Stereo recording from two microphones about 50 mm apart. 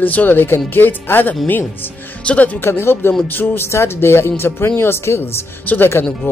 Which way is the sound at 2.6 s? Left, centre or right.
Left.